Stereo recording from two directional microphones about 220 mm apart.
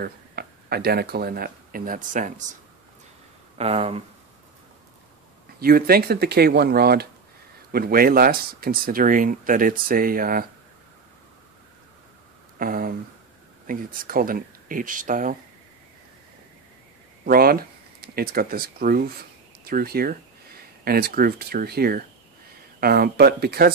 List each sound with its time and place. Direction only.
0.0 s speech: 45° right (ahead or behind)
3.5 s speech: 25° right (ahead or behind)
5.6 s speech: 40° right (ahead or behind)
12.5 s a sound: 40° right (ahead or behind)
13.7 s speech: 40° right (ahead or behind)
17.2 s speech: 40° right (ahead or behind)